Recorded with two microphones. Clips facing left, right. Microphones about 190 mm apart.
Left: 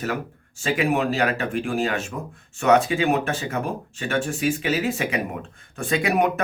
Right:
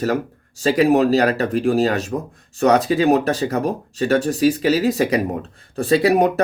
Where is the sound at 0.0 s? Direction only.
40° right (ahead or behind).